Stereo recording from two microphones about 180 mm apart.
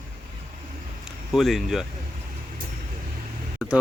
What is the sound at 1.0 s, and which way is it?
Speech, centre (ahead or behind).